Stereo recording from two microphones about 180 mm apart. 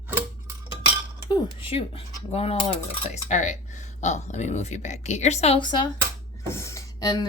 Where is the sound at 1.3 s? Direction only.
30° left (ahead or behind).